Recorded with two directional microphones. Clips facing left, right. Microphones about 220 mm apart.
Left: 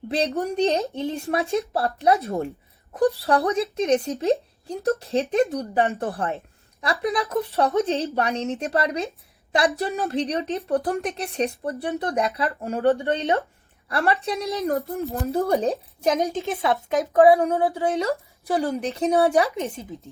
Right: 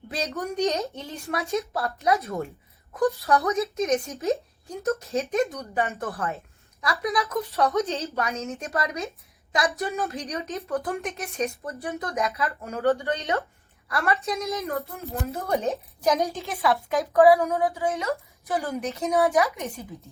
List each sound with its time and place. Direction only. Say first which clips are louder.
0.1 s a woman's voice: left 6 dB; 30° left (ahead or behind)